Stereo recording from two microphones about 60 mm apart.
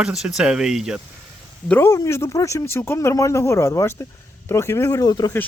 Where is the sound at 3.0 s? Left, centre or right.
Left.